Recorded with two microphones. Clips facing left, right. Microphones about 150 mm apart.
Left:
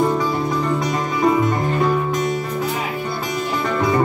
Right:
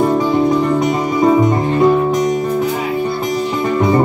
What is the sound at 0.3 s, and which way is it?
Music, 20° right (ahead or behind).